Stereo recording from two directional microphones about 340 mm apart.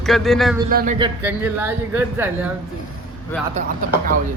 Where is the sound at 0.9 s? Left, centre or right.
Centre.